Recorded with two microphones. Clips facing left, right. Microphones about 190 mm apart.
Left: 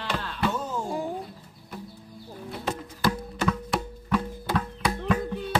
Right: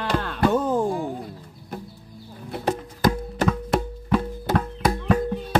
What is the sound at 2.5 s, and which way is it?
Music, 45° right (ahead or behind).